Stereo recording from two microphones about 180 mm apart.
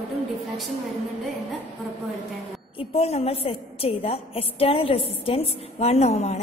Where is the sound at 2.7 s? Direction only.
35° left (ahead or behind).